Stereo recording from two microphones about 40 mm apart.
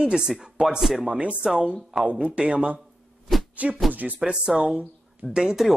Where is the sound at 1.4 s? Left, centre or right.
Right.